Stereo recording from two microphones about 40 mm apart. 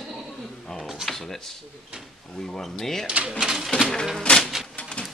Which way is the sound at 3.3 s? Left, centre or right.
Right.